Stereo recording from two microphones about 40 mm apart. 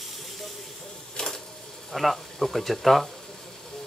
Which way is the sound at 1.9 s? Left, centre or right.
Centre.